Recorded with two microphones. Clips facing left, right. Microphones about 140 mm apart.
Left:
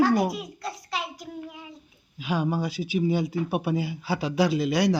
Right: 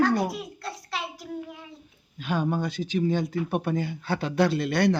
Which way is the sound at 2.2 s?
Centre (ahead or behind).